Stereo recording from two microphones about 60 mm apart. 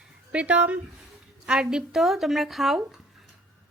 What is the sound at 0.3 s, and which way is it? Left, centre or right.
Speech, right.